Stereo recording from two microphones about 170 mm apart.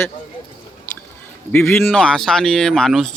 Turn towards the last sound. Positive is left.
turn(degrees=0)  # may be behind; listen again after turning